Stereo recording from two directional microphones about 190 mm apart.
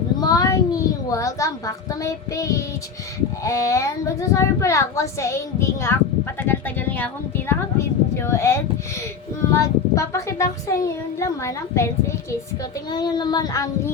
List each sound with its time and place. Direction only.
0.2 s a sound: 20° left (ahead or behind)
3.4 s a woman's voice: 15° left (ahead or behind)
12.9 s child singing: 20° left (ahead or behind)